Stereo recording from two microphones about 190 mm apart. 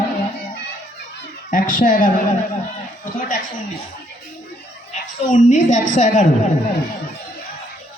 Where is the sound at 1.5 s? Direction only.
45° left (ahead or behind).